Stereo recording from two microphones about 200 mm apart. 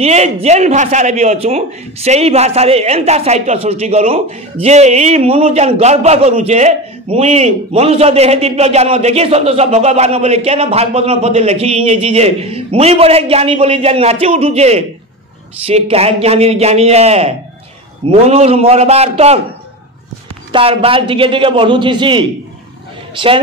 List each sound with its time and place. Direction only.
0.0 s a man's voice: 35° right (ahead or behind)
20.5 s a man's voice: 25° right (ahead or behind)